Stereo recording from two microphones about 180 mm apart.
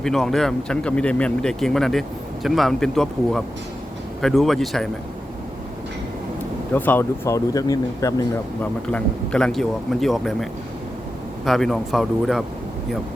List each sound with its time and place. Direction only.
0.0 s speech: centre (ahead or behind)
6.7 s speech: 10° left (ahead or behind)
8.9 s speech: 5° left (ahead or behind)